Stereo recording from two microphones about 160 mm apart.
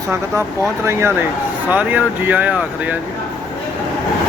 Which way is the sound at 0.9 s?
15° right (ahead or behind).